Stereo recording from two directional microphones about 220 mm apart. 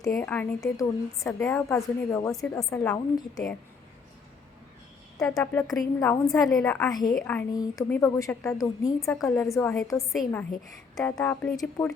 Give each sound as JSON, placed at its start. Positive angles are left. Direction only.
{"t": 0.1, "sound": "a woman's voice", "side_deg": 5}
{"t": 5.2, "sound": "a woman's voice", "side_deg": 5}
{"t": 7.5, "sound": "a woman's voice", "side_deg": 15}
{"t": 9.2, "sound": "a woman's voice", "side_deg": 5}
{"t": 10.1, "sound": "a woman's voice", "side_deg": 0}
{"t": 10.9, "sound": "a woman's voice", "side_deg": 10}